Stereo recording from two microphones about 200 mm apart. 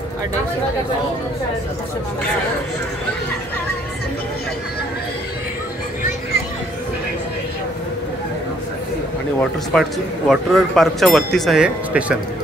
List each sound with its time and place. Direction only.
9.4 s speech: centre (ahead or behind)